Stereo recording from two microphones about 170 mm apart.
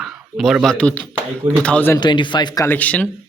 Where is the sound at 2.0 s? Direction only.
25° left (ahead or behind); by 3.1 s 10° left (ahead or behind).